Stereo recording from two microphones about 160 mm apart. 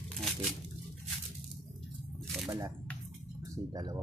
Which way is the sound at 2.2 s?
Centre (ahead or behind).